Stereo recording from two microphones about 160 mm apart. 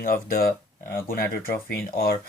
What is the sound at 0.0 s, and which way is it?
Speech, 65° left (ahead or behind).